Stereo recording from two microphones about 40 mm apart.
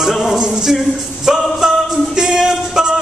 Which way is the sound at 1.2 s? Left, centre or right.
Centre.